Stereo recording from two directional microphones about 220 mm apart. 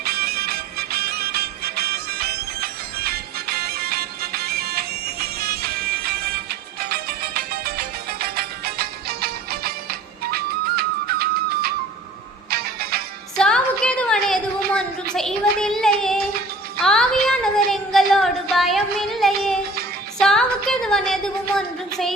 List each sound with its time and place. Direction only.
0.0 s music: 45° right (ahead or behind)
13.3 s a sound: 5° left (ahead or behind)
20.1 s music: centre (ahead or behind)